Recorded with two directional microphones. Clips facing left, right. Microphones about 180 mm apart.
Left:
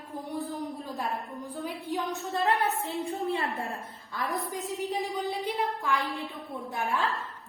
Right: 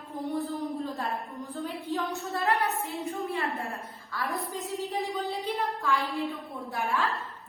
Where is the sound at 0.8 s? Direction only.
15° left (ahead or behind).